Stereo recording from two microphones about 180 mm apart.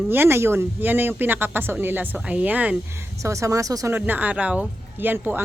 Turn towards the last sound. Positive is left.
turn(degrees=-10)  # may be behind; listen again after turning